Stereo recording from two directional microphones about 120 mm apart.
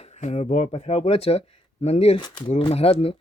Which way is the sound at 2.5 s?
60° left (ahead or behind).